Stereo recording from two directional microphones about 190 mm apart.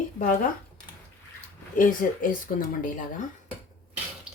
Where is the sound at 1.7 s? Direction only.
45° left (ahead or behind).